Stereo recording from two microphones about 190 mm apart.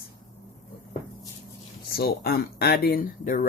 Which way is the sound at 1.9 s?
55° left (ahead or behind).